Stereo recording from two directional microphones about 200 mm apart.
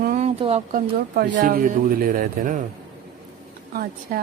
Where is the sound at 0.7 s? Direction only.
45° right (ahead or behind).